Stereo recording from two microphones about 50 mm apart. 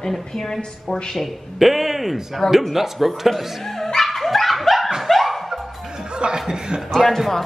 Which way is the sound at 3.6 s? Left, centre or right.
Centre.